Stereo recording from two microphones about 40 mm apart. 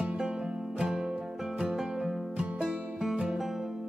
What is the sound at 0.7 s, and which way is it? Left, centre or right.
Music, centre.